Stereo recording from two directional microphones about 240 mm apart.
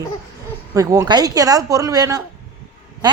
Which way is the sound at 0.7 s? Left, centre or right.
Centre.